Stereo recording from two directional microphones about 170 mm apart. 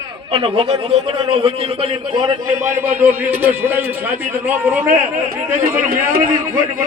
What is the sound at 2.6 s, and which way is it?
A man's voice, 10° right (ahead or behind).